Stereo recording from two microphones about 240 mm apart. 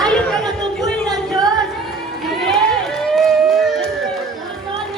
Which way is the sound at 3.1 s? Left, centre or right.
Centre.